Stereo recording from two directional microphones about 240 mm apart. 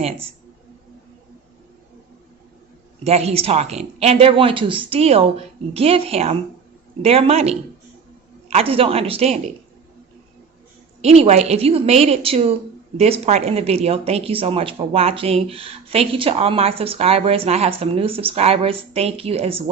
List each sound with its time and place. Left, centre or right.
3.0 s speech: right
11.0 s speech: right